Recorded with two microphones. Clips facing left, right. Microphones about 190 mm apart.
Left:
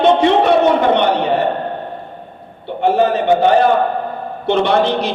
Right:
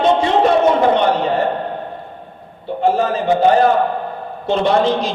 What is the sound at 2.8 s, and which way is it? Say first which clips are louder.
Speech: left 2 dB; 65° left (ahead or behind).